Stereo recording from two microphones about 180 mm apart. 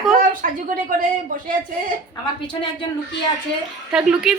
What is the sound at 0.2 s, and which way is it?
A woman's voice, 50° right (ahead or behind).